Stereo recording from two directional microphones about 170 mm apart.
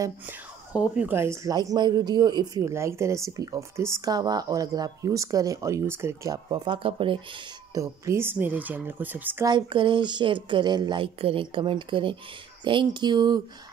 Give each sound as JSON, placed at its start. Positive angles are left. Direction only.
{"t": 0.0, "sound": "a woman's voice", "side_deg": -10}
{"t": 7.7, "sound": "speech", "side_deg": -20}
{"t": 9.5, "sound": "a woman's voice", "side_deg": -30}